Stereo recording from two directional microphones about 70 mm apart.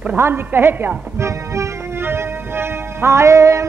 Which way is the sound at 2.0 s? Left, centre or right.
Right.